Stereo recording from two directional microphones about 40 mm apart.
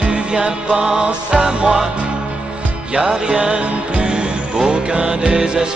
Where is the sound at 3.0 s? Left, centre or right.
Centre.